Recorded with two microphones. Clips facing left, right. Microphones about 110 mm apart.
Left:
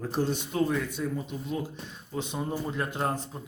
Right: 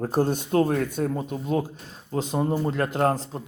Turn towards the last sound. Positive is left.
turn(degrees=-80)